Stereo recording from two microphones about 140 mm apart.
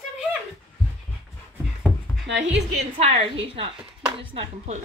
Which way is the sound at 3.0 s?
45° right (ahead or behind).